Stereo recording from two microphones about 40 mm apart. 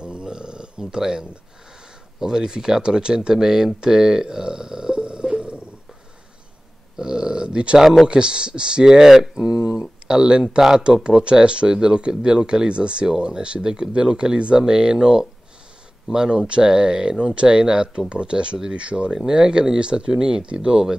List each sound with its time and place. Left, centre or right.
0.0 s burping: right
2.1 s speech: centre
7.0 s a sound: centre
7.8 s speech: centre
8.1 s speech: right
9.3 s a sound: centre
10.8 s speech: right
19.1 s speech: centre